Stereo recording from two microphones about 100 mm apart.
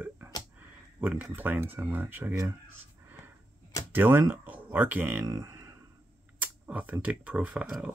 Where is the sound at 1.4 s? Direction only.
20° right (ahead or behind).